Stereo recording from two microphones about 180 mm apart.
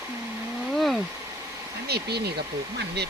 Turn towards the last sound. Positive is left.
turn(degrees=-65)  # may be behind; listen again after turning